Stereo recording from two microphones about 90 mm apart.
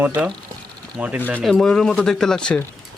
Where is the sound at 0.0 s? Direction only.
20° right (ahead or behind).